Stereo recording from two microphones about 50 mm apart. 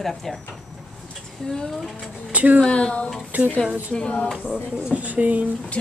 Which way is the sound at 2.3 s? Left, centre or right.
Right.